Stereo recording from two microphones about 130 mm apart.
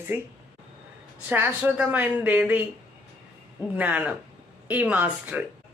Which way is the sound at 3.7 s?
10° right (ahead or behind).